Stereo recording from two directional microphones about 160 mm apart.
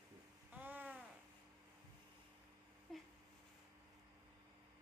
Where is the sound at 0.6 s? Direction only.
10° right (ahead or behind).